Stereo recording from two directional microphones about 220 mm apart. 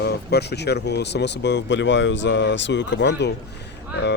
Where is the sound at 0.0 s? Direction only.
50° left (ahead or behind).